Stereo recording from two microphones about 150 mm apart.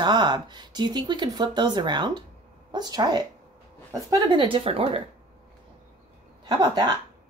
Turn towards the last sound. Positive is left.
turn(degrees=-30)  # may be behind; listen again after turning